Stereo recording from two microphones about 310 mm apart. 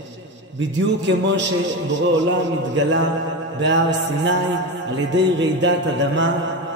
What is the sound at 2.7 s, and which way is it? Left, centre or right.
Music, right.